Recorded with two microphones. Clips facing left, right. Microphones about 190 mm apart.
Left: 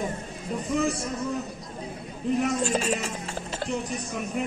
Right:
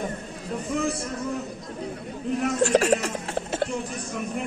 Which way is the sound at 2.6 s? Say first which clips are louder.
Right 6 dB; 75° right (ahead or behind).